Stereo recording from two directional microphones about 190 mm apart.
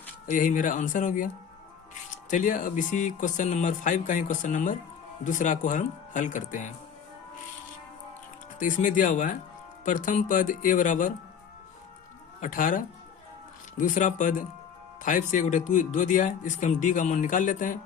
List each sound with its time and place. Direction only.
0.3 s speech: 45° left (ahead or behind)
8.5 s speech: 45° left (ahead or behind)
12.4 s speech: 45° left (ahead or behind)